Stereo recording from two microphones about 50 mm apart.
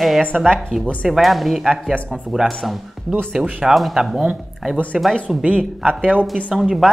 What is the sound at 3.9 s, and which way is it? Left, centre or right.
Speech, centre.